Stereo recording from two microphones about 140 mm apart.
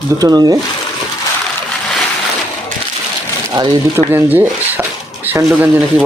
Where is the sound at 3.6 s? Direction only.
35° right (ahead or behind).